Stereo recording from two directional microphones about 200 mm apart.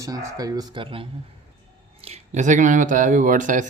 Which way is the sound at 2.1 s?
35° right (ahead or behind).